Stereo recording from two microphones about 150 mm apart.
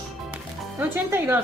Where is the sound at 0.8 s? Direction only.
15° right (ahead or behind).